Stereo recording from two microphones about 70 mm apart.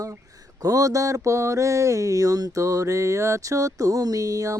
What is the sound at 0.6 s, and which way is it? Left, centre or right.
Mantra, right.